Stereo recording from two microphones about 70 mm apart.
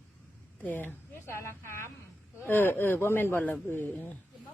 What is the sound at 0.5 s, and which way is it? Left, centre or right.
Speech, left.